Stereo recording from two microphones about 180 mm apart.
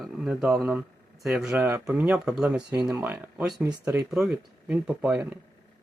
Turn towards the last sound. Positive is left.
turn(degrees=-5)  # may be behind; listen again after turning